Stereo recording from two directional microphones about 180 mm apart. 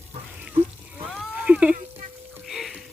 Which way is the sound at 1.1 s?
Centre (ahead or behind).